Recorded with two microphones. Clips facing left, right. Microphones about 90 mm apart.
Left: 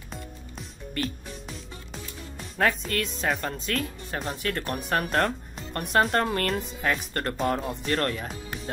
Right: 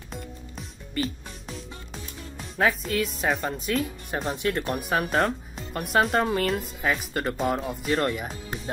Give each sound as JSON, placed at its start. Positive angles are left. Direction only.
{"t": 0.1, "sound": "music", "side_deg": 0}
{"t": 2.3, "sound": "speech", "side_deg": 0}
{"t": 4.4, "sound": "speech", "side_deg": -20}
{"t": 4.6, "sound": "speech", "side_deg": -5}